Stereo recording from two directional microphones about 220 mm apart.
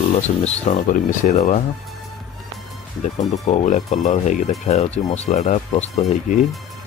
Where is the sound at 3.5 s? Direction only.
30° left (ahead or behind).